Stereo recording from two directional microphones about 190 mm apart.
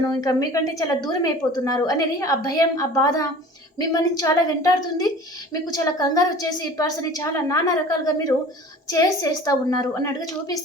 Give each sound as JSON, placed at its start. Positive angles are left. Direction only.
{"t": 0.0, "sound": "a woman's voice", "side_deg": 20}